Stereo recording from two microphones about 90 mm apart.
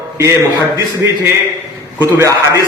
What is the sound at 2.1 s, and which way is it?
Speech, 30° right (ahead or behind).